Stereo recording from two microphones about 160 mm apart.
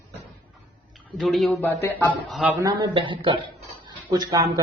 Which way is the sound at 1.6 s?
15° left (ahead or behind).